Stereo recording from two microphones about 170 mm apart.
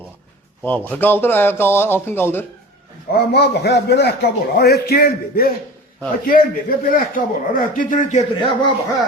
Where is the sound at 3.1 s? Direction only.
70° left (ahead or behind); by 8.2 s 50° left (ahead or behind).